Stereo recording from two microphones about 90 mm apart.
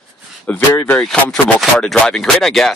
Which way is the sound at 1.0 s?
5° left (ahead or behind).